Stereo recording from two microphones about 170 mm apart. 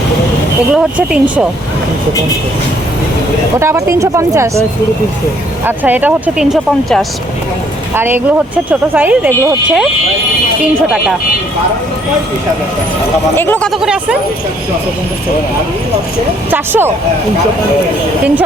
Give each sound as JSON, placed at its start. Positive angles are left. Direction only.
{"t": 0.7, "sound": "speech", "side_deg": -5}
{"t": 3.6, "sound": "speech", "side_deg": -15}
{"t": 5.6, "sound": "speech", "side_deg": -10}
{"t": 7.9, "sound": "speech", "side_deg": -10}
{"t": 10.6, "sound": "speech", "side_deg": -5}
{"t": 13.3, "sound": "speech", "side_deg": 10}
{"t": 13.7, "sound": "speech", "side_deg": -5}
{"t": 16.5, "sound": "speech", "side_deg": -10}